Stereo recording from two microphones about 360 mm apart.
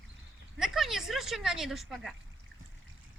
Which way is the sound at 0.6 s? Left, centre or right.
Centre.